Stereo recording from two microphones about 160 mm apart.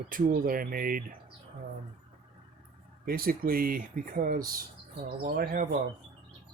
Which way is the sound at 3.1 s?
65° right (ahead or behind).